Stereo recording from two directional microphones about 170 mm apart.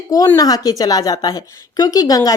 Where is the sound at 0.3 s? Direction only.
20° left (ahead or behind).